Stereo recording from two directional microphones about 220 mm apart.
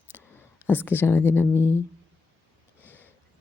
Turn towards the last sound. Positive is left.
turn(degrees=10)  # may be behind; listen again after turning